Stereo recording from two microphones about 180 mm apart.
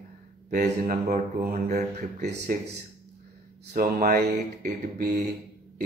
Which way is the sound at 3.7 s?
50° right (ahead or behind).